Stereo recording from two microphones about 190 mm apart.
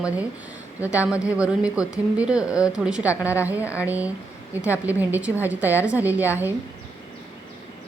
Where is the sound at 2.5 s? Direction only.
15° left (ahead or behind).